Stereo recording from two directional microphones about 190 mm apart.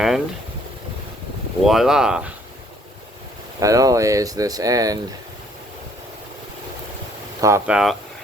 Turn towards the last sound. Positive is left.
turn(degrees=-15)  # may be behind; listen again after turning